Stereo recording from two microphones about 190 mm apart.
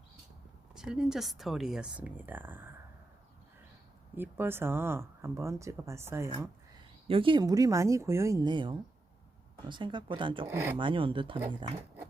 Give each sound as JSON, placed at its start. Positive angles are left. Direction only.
{"t": 0.7, "sound": "speech", "side_deg": -5}
{"t": 4.1, "sound": "speech", "side_deg": -10}
{"t": 7.1, "sound": "speech", "side_deg": -25}
{"t": 10.4, "sound": "speech", "side_deg": -10}
{"t": 10.8, "sound": "speech", "side_deg": -25}